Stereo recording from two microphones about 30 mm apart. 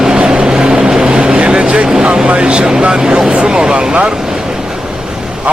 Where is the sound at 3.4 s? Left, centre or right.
Right.